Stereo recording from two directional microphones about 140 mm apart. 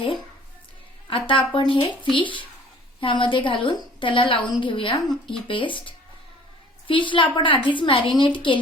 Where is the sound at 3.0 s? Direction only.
35° left (ahead or behind).